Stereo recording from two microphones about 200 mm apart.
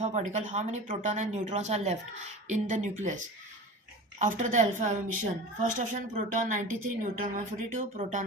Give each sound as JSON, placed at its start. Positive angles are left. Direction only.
{"t": 0.0, "sound": "speech", "side_deg": -35}
{"t": 4.2, "sound": "speech", "side_deg": -40}